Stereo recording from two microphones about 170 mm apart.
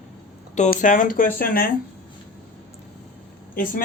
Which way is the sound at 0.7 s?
50° left (ahead or behind).